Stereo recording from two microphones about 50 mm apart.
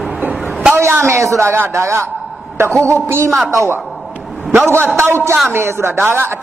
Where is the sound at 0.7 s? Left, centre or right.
Right.